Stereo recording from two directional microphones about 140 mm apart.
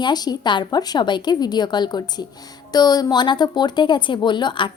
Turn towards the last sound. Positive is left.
turn(degrees=35)  # may be behind; listen again after turning